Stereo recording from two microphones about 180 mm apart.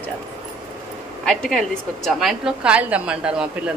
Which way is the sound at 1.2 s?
Centre (ahead or behind).